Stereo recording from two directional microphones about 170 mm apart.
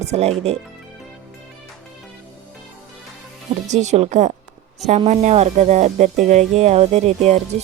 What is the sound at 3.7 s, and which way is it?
Speech, 40° right (ahead or behind).